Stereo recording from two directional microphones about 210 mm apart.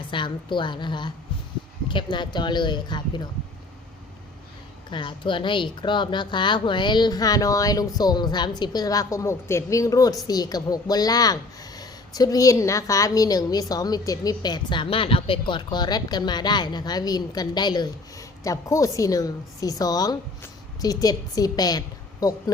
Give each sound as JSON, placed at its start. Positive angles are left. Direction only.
{"t": 0.1, "sound": "speech", "side_deg": 25}
{"t": 4.9, "sound": "a woman's voice", "side_deg": 25}